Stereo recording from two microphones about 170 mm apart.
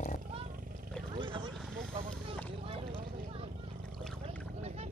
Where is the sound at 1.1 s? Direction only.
30° right (ahead or behind).